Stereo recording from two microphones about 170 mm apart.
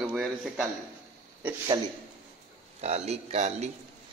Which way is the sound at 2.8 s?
40° right (ahead or behind).